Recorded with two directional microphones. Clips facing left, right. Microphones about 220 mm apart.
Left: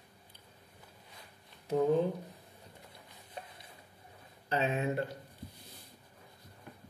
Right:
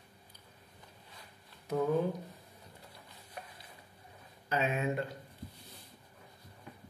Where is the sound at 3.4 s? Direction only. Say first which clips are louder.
Left 1 dB; 30° left (ahead or behind).